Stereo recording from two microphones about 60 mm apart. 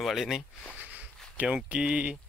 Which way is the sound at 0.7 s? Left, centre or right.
Right.